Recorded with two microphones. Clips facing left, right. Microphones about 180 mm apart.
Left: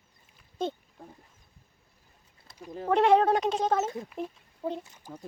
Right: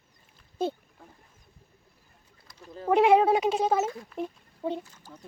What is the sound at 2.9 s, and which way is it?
Speech, 10° right (ahead or behind).